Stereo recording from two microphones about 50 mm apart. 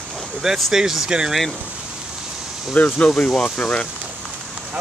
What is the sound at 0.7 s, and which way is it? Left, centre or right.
Speech, centre.